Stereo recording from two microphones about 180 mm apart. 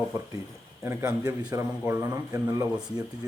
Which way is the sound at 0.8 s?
15° right (ahead or behind).